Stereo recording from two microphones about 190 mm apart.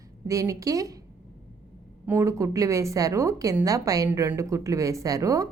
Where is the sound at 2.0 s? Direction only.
15° right (ahead or behind).